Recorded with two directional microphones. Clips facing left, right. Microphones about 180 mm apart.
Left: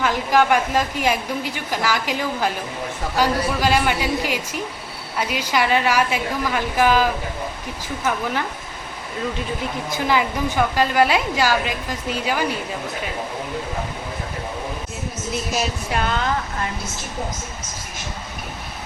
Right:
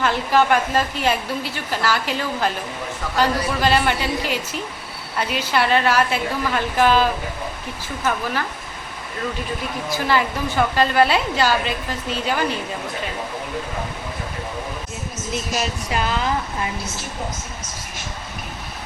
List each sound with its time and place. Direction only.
0.0 s a woman's voice: 15° left (ahead or behind)
9.9 s a woman's voice: 15° left (ahead or behind)
15.3 s speech: centre (ahead or behind)